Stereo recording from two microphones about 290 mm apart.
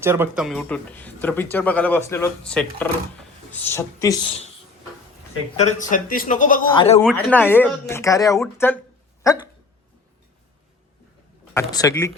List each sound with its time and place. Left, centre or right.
0.0 s speech: centre
5.5 s a man's voice: left
7.0 s speech: centre
11.5 s speech: centre